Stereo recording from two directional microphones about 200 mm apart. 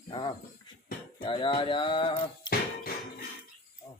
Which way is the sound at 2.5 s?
50° left (ahead or behind).